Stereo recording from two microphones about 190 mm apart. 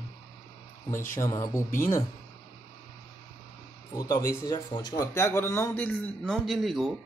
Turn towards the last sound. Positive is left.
turn(degrees=0)  # may be behind; listen again after turning